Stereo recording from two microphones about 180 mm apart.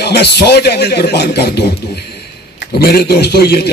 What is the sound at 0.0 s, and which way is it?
A man's voice, 65° left (ahead or behind).